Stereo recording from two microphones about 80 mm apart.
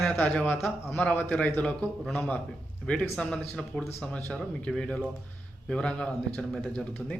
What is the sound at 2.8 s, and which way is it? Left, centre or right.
Speech, centre.